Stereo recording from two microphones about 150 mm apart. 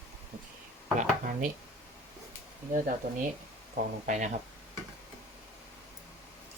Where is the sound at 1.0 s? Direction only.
65° right (ahead or behind).